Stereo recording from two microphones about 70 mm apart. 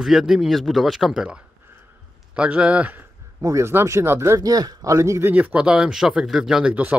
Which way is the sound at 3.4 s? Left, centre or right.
Right.